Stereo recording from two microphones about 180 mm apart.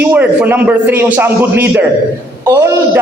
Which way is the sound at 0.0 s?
10° right (ahead or behind).